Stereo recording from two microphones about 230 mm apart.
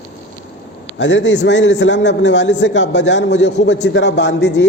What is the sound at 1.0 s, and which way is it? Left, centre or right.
A man's voice, left.